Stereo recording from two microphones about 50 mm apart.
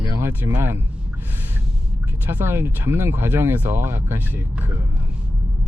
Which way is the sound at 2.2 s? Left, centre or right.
Right.